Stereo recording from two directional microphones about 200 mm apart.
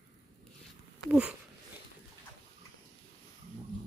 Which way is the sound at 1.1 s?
5° right (ahead or behind).